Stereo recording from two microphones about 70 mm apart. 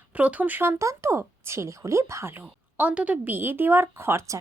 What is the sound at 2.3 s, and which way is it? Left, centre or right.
A woman's voice, right.